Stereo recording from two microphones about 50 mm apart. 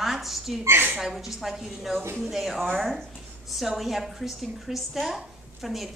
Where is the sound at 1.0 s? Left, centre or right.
Centre.